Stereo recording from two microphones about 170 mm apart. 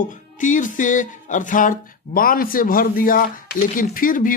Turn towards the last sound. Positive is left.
turn(degrees=55)  # may be behind; listen again after turning